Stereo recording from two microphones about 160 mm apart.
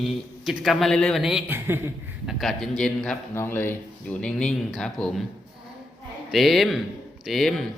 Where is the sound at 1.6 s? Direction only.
15° right (ahead or behind).